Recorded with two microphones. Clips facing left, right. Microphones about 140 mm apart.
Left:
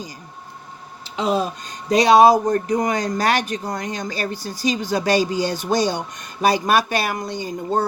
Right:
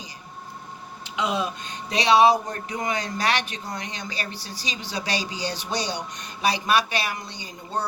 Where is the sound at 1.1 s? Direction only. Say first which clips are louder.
Left 5 dB; 35° left (ahead or behind).